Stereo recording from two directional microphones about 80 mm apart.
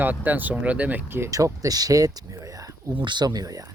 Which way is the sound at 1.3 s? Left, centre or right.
Right.